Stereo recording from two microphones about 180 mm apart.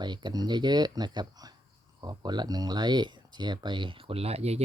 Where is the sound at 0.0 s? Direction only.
25° right (ahead or behind).